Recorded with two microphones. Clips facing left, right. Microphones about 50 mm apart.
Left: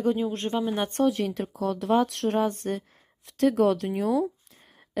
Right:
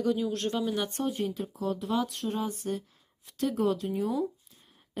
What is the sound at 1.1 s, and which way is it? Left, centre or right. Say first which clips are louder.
Speech: left 5 dB; left.